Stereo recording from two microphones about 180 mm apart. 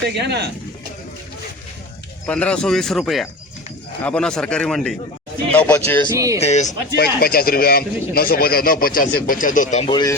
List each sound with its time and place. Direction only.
0.2 s speech: 70° right (ahead or behind)
2.2 s speech: 5° left (ahead or behind)
6.1 s speech: 20° right (ahead or behind)
6.4 s speech: 40° left (ahead or behind)
6.9 s a man's voice: 60° left (ahead or behind)
9.8 s speech: 25° left (ahead or behind)